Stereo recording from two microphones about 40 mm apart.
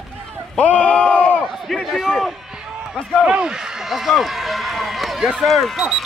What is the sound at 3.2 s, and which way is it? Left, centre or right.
Speech, right.